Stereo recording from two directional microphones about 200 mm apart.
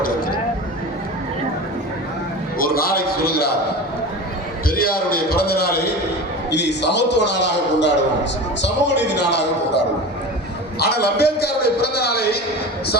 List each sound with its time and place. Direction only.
0.0 s a sound: 45° left (ahead or behind)
2.6 s a man's voice: 50° left (ahead or behind)
4.7 s a man's voice: 50° left (ahead or behind)